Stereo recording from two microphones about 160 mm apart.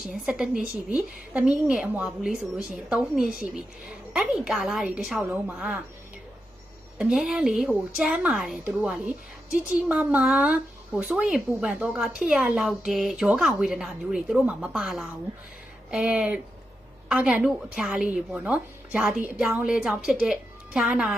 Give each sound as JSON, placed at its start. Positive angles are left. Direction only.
{"t": 0.1, "sound": "speech", "side_deg": -5}
{"t": 7.0, "sound": "speech", "side_deg": -5}